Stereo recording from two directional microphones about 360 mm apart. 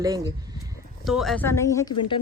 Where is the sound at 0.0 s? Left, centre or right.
Centre.